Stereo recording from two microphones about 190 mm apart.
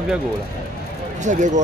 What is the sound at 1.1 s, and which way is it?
Speech, 40° right (ahead or behind).